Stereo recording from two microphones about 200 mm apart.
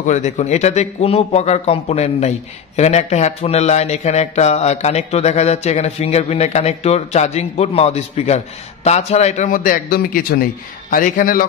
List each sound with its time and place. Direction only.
0.0 s a man's voice: 35° left (ahead or behind)